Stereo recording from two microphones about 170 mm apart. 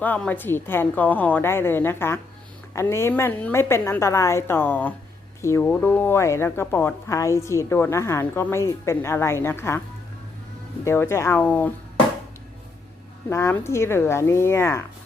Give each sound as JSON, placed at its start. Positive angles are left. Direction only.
{"t": 0.0, "sound": "speech", "side_deg": 10}
{"t": 10.8, "sound": "speech", "side_deg": 15}
{"t": 13.3, "sound": "speech", "side_deg": 15}